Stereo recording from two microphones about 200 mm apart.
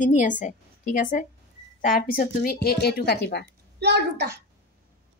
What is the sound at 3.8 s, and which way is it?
Speech, 55° right (ahead or behind).